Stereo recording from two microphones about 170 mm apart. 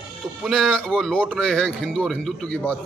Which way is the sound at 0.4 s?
Centre (ahead or behind).